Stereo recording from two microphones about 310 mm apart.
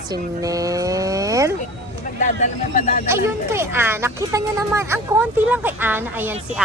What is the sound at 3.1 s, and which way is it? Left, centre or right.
A woman's voice, centre.